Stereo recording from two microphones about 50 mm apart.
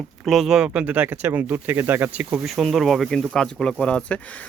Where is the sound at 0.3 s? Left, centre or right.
Centre.